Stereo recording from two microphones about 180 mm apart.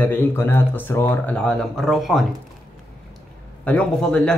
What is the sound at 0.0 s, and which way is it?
Speech, 10° left (ahead or behind).